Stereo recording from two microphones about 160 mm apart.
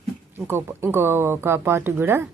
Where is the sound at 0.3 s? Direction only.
15° right (ahead or behind).